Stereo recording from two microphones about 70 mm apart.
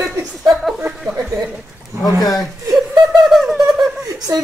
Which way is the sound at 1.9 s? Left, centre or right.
Right.